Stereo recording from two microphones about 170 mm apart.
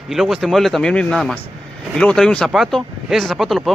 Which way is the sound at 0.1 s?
Centre (ahead or behind).